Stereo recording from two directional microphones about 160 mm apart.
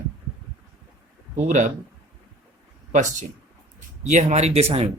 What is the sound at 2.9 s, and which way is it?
Speech, 50° right (ahead or behind).